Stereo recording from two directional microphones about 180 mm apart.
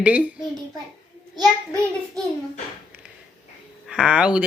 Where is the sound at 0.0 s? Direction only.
10° right (ahead or behind).